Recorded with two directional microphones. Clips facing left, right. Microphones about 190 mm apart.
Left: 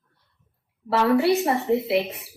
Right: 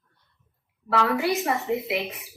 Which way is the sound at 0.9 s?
30° left (ahead or behind).